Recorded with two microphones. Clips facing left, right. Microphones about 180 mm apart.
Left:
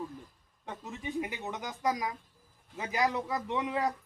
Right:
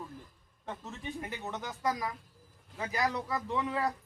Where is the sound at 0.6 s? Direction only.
15° left (ahead or behind).